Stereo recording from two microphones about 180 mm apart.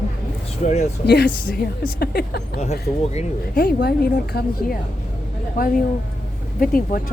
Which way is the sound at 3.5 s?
60° left (ahead or behind).